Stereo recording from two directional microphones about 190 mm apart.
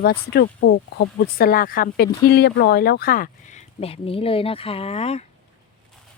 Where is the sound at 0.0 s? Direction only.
55° left (ahead or behind); by 5.2 s 35° left (ahead or behind).